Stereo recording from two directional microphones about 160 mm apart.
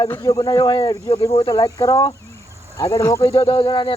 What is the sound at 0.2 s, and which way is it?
Speech, 25° left (ahead or behind).